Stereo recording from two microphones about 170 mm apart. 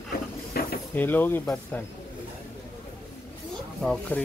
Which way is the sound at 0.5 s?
65° left (ahead or behind).